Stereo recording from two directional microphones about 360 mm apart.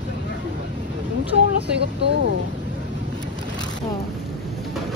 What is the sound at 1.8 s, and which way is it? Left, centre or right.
Speech, right.